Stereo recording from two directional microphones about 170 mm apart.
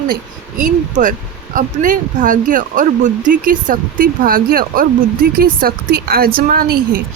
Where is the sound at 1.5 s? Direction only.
50° right (ahead or behind).